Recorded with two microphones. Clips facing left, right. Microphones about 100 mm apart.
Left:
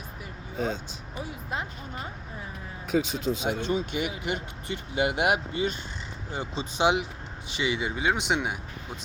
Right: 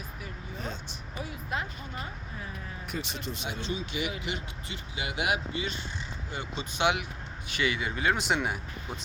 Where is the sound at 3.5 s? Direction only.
50° left (ahead or behind).